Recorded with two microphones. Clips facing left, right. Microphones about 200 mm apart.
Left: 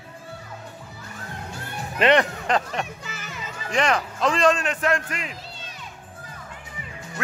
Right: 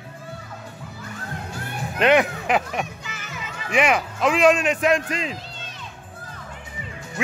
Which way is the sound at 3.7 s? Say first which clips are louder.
Right 2 dB; 5° right (ahead or behind).